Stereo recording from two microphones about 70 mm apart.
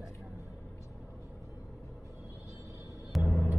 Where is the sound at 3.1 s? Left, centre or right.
Centre.